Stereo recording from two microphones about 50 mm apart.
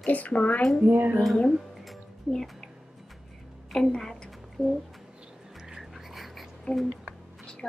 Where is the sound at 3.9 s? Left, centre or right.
Centre.